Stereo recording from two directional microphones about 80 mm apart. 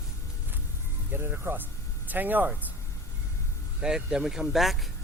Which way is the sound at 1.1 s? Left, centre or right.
Right.